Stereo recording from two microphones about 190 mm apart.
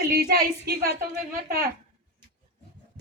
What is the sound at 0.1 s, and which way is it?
Speech, 55° right (ahead or behind).